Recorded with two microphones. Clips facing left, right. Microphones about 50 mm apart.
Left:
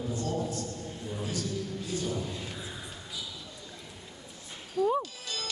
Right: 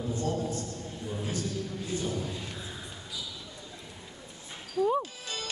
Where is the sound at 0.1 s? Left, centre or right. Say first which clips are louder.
Right 2 dB; right.